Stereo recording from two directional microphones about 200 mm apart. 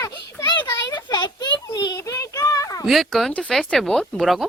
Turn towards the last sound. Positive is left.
turn(degrees=0)  # may be behind; listen again after turning